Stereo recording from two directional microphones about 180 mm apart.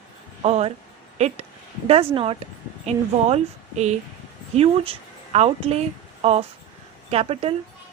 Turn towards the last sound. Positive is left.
turn(degrees=-35)  # may be behind; listen again after turning